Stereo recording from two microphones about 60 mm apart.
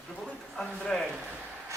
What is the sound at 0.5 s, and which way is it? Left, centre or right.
Speech, centre.